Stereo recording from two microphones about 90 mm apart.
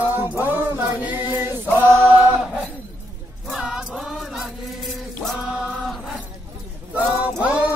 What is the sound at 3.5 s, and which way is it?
Music, 5° right (ahead or behind).